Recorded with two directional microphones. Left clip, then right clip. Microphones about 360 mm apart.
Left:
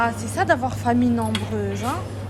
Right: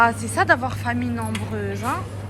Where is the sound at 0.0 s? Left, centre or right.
Centre.